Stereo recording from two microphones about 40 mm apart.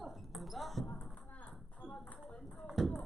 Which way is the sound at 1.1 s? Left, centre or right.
Left.